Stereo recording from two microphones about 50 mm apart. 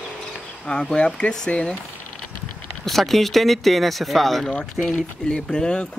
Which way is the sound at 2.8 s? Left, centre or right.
Centre.